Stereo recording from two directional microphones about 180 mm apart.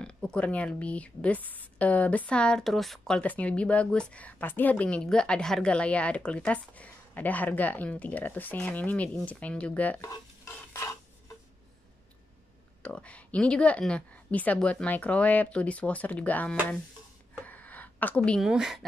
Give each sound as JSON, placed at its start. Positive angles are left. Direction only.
{"t": 0.0, "sound": "speech", "side_deg": 5}
{"t": 10.0, "sound": "stir", "side_deg": 15}
{"t": 12.8, "sound": "speech", "side_deg": 5}
{"t": 17.4, "sound": "a sound", "side_deg": 10}